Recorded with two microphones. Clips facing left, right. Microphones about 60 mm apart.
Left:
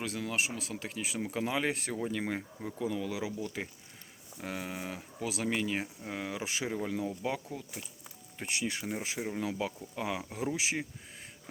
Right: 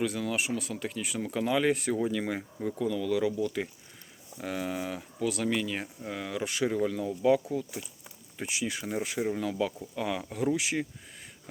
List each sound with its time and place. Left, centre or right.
0.0 s speech: centre
7.1 s speech: centre
9.4 s speech: centre